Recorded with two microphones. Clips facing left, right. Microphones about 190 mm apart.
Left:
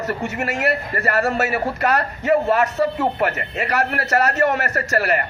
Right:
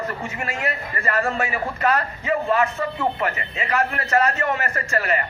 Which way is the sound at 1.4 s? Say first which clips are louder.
Left 4 dB; 70° left (ahead or behind).